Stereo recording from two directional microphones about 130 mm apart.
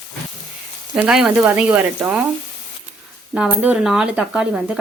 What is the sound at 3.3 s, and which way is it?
Speech, 10° right (ahead or behind).